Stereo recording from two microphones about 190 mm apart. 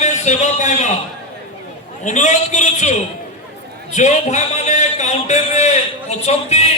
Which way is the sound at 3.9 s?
35° left (ahead or behind).